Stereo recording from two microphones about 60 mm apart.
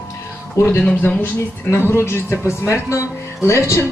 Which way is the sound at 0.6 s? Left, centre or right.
Left.